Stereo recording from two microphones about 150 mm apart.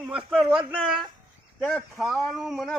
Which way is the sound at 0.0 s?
5° right (ahead or behind).